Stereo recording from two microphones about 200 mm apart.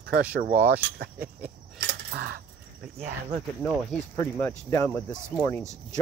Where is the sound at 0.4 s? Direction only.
45° right (ahead or behind).